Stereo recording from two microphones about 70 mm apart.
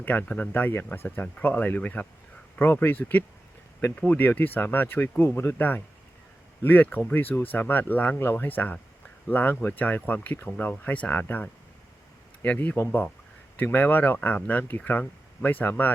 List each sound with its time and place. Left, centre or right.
0.0 s speech: left